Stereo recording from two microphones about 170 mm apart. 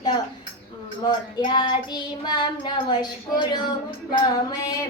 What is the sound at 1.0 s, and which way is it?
Child singing, 25° left (ahead or behind).